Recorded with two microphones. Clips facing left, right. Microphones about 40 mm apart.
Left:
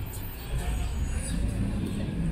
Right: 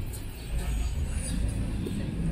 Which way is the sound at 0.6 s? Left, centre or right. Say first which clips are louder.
Left 2 dB; left.